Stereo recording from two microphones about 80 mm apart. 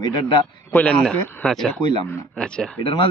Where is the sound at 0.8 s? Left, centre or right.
Centre.